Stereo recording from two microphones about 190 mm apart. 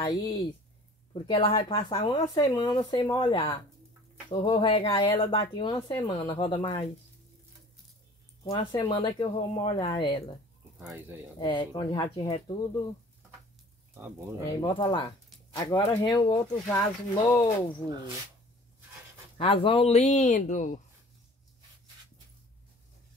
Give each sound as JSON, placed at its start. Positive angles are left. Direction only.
{"t": 0.0, "sound": "speech", "side_deg": 20}
{"t": 8.5, "sound": "speech", "side_deg": 25}
{"t": 10.8, "sound": "speech", "side_deg": -5}
{"t": 11.3, "sound": "speech", "side_deg": 25}
{"t": 13.9, "sound": "speech", "side_deg": -10}
{"t": 14.6, "sound": "speech", "side_deg": 25}
{"t": 19.3, "sound": "speech", "side_deg": 30}